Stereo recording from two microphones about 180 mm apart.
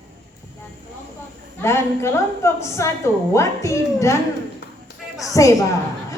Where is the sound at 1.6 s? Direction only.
15° left (ahead or behind).